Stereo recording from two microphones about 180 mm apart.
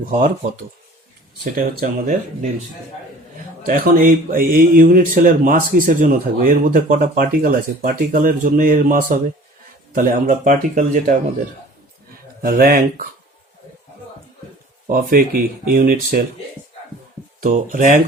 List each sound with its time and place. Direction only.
1.5 s speech: 50° right (ahead or behind)
3.7 s speech: 50° right (ahead or behind)
12.4 s speech: 55° right (ahead or behind)
14.8 s speech: 55° right (ahead or behind)
17.4 s speech: 45° right (ahead or behind)